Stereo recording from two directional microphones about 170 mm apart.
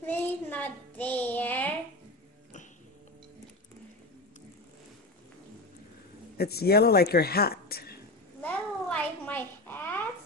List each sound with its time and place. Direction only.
0.0 s child singing: 10° left (ahead or behind)
6.3 s speech: 65° left (ahead or behind)
8.4 s a sound: 10° left (ahead or behind)